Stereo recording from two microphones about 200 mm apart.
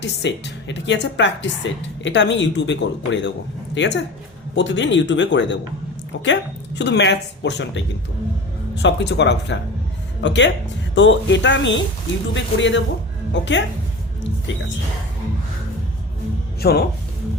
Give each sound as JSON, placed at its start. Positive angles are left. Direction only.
{"t": 0.0, "sound": "a woman's voice", "side_deg": 60}
{"t": 16.6, "sound": "speech", "side_deg": 50}